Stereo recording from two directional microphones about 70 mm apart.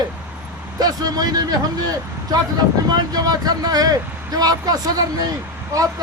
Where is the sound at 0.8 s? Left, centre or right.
Right.